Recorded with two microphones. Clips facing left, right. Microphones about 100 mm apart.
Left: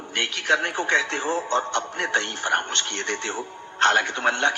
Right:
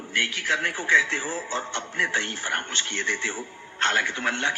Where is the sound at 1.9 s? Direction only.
65° left (ahead or behind).